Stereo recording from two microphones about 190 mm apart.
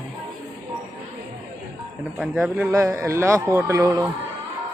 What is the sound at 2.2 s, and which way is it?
A man's voice, 5° right (ahead or behind).